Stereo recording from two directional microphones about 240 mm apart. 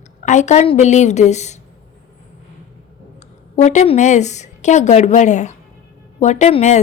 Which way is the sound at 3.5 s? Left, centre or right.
Left.